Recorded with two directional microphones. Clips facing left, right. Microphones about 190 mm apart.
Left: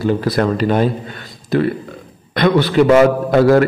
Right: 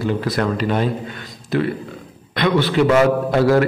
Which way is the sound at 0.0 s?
40° left (ahead or behind).